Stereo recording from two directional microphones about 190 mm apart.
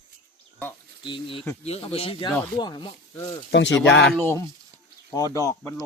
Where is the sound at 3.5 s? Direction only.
75° left (ahead or behind).